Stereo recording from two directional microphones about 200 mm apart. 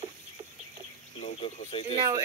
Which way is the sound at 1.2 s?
30° left (ahead or behind).